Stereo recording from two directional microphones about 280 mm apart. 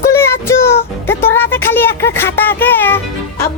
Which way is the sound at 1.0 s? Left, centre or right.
Centre.